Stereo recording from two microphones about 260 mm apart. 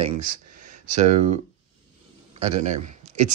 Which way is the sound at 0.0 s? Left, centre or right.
Right.